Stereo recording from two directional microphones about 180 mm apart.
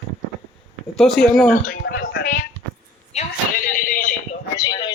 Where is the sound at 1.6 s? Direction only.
65° left (ahead or behind).